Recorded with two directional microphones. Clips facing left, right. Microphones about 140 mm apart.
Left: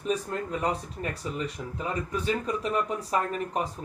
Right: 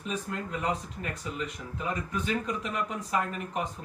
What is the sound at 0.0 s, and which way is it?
Speech, 35° left (ahead or behind).